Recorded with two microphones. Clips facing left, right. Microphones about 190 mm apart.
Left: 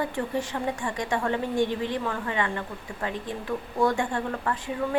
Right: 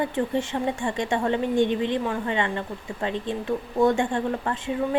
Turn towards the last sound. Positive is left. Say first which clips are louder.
# right 2 dB
turn(degrees=-25)  # may be behind; listen again after turning